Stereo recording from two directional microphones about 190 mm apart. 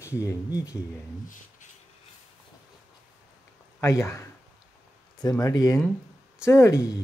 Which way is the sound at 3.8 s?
15° left (ahead or behind).